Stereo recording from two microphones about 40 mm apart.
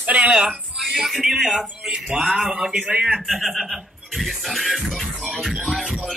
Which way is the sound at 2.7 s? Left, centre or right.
Right.